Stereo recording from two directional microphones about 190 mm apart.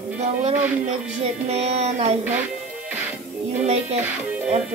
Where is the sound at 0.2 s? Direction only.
35° right (ahead or behind).